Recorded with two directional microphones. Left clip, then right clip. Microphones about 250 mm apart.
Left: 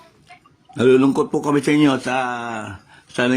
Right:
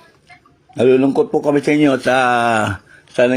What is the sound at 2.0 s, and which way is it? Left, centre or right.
Speech, centre.